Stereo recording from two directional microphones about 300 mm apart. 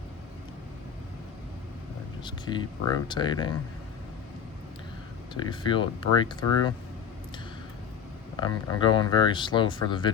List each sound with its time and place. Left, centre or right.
2.2 s speech: centre
5.3 s speech: centre
8.4 s speech: centre